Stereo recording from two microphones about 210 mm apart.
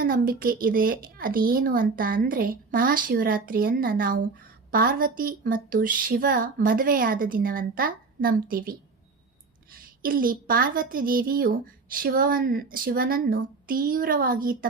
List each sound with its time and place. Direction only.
0.0 s speech: 45° right (ahead or behind)
10.0 s speech: 40° right (ahead or behind)